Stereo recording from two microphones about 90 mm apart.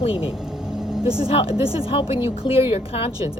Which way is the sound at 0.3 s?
5° right (ahead or behind).